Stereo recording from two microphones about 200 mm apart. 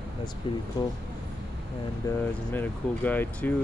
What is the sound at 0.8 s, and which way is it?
Speech, 20° left (ahead or behind).